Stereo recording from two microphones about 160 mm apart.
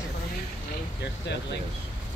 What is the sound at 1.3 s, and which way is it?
Speech, 90° left.